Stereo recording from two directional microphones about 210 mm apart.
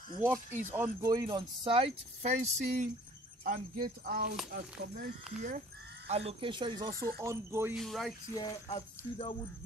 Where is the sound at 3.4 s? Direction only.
45° right (ahead or behind).